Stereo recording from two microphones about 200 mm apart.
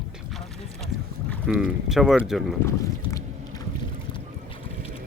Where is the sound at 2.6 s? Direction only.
15° left (ahead or behind).